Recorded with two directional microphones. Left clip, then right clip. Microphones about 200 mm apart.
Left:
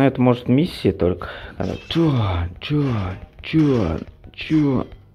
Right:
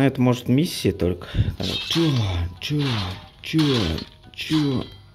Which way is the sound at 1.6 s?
5° right (ahead or behind).